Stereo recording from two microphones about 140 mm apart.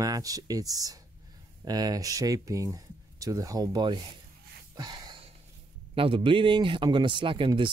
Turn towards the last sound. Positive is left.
turn(degrees=-35)  # may be behind; listen again after turning